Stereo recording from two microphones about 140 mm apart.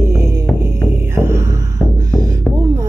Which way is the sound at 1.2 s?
20° right (ahead or behind).